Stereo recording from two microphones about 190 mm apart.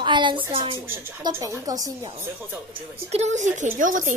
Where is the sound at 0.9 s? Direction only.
15° right (ahead or behind).